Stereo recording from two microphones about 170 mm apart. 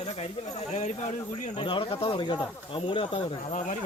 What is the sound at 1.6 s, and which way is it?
Speech, 30° left (ahead or behind).